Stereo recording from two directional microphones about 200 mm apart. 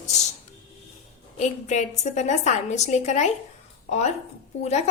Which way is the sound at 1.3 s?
35° left (ahead or behind).